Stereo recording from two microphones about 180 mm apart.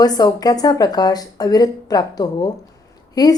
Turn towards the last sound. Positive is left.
turn(degrees=20)  # may be behind; listen again after turning